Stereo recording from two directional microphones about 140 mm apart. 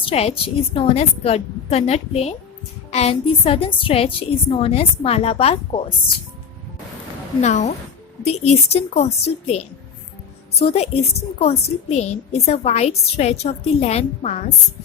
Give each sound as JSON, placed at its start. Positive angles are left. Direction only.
{"t": 0.0, "sound": "a woman's voice", "side_deg": 45}
{"t": 7.4, "sound": "a woman's voice", "side_deg": 55}